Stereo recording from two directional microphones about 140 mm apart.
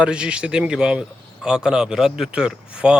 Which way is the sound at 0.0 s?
10° right (ahead or behind).